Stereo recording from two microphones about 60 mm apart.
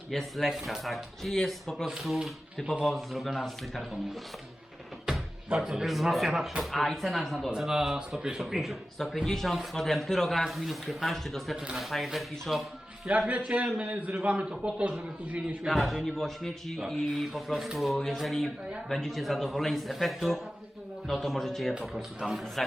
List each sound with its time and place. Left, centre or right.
0.1 s speech: centre
5.1 s music: centre
5.5 s speech: centre
11.5 s speech: centre
11.8 s speech: centre
13.1 s a man's voice: right
15.6 s speech: centre